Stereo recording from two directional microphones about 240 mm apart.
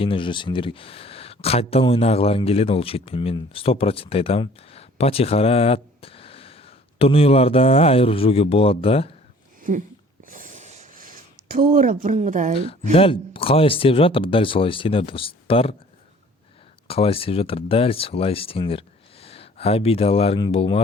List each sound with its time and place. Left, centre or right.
0.0 s speech: left
9.7 s speech: right
10.2 s a sound: right
12.9 s speech: left
16.9 s speech: left